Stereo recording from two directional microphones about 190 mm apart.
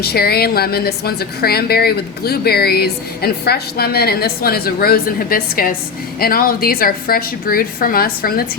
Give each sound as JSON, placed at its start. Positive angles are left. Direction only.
{"t": 0.0, "sound": "a woman's voice", "side_deg": 55}